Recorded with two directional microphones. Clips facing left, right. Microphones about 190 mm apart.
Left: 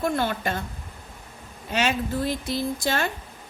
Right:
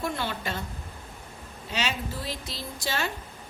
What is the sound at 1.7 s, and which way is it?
A woman's voice, 50° left (ahead or behind).